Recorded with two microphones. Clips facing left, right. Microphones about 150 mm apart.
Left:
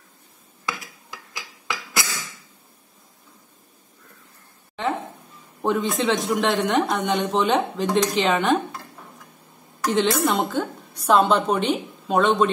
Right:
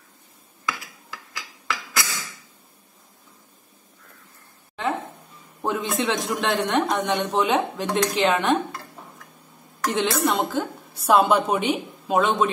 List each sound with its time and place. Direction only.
1.3 s a sound: 15° left (ahead or behind)
5.6 s a man's voice: centre (ahead or behind)
9.8 s a man's voice: centre (ahead or behind)